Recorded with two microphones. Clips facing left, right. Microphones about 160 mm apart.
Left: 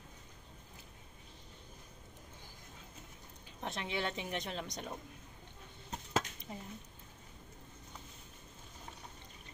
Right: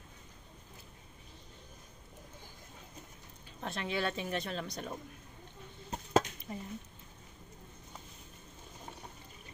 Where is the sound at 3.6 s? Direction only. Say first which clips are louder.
Right 3 dB; 20° left (ahead or behind).